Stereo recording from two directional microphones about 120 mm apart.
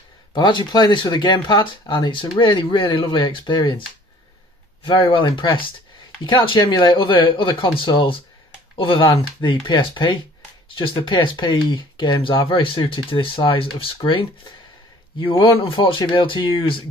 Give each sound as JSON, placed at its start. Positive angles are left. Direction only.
{"t": 0.3, "sound": "speech", "side_deg": 40}
{"t": 4.8, "sound": "speech", "side_deg": 45}